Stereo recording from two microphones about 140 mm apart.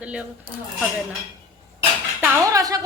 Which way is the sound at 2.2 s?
25° right (ahead or behind).